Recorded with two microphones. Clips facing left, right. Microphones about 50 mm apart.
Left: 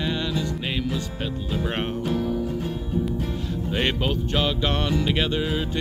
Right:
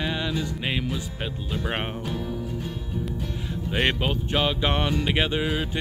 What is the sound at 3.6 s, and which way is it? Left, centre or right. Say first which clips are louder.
Music: even; centre.